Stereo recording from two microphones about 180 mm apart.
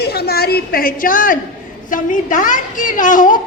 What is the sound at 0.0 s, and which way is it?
A woman's voice, 65° left (ahead or behind).